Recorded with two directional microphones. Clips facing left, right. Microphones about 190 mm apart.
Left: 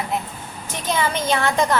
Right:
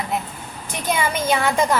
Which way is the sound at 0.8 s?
10° right (ahead or behind).